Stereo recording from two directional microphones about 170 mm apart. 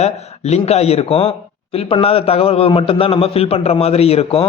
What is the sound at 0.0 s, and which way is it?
A man's voice, 40° left (ahead or behind).